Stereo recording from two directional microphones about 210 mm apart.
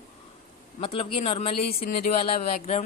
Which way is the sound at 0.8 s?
25° left (ahead or behind).